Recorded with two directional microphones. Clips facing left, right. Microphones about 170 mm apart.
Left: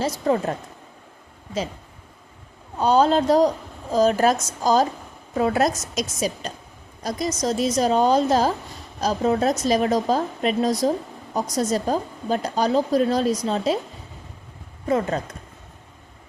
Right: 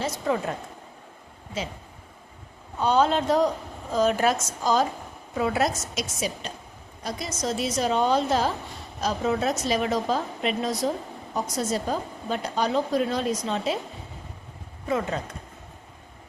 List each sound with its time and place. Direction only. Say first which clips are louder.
0.0 s speech: left 5 dB; 35° left (ahead or behind)
2.8 s speech: left 4 dB; 35° left (ahead or behind)
14.8 s speech: left 5 dB; 40° left (ahead or behind)